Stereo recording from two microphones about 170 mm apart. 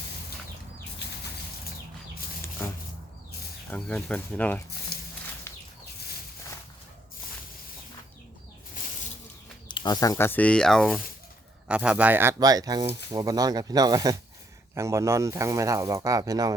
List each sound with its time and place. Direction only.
3.7 s speech: 5° left (ahead or behind)
4.9 s walk: 65° left (ahead or behind)
5.5 s a sound: 15° left (ahead or behind)
9.6 s speech: 25° left (ahead or behind); by 16.6 s 20° right (ahead or behind)